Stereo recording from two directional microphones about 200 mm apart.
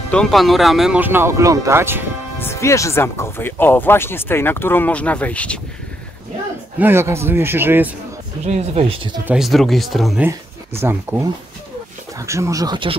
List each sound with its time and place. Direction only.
0.1 s speech: centre (ahead or behind)
2.3 s speech: 15° left (ahead or behind)
6.8 s speech: 10° right (ahead or behind)
8.5 s speech: 30° right (ahead or behind)
9.2 s speech: 5° right (ahead or behind)
10.8 s speech: 10° right (ahead or behind)
12.3 s speech: 15° right (ahead or behind)